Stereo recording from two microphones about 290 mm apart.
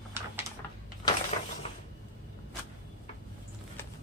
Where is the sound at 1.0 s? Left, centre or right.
Centre.